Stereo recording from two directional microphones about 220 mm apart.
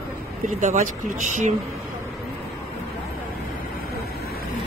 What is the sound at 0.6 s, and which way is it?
Speech, 35° right (ahead or behind).